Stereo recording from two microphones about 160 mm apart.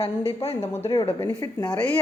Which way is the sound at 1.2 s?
15° left (ahead or behind).